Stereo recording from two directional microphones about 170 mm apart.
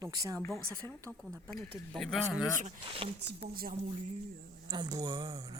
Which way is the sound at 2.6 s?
35° right (ahead or behind).